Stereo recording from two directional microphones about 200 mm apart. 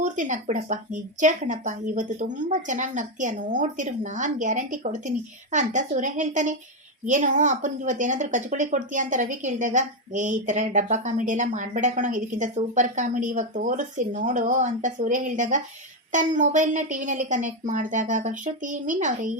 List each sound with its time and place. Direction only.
0.0 s a woman's voice: 40° right (ahead or behind)